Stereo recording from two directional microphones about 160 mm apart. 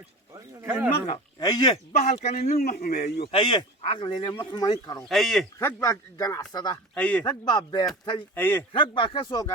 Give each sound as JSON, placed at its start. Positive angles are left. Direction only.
{"t": 0.6, "sound": "speech", "side_deg": -10}
{"t": 0.9, "sound": "speech", "side_deg": 40}
{"t": 1.4, "sound": "speech", "side_deg": 25}
{"t": 2.0, "sound": "speech", "side_deg": 45}
{"t": 2.6, "sound": "a man's voice", "side_deg": 65}
{"t": 3.3, "sound": "speech", "side_deg": 30}
{"t": 5.0, "sound": "speech", "side_deg": 0}
{"t": 5.5, "sound": "speech", "side_deg": 15}
{"t": 6.9, "sound": "a man's voice", "side_deg": 10}
{"t": 7.3, "sound": "speech", "side_deg": 25}
{"t": 8.4, "sound": "a man's voice", "side_deg": 10}
{"t": 8.7, "sound": "speech", "side_deg": 30}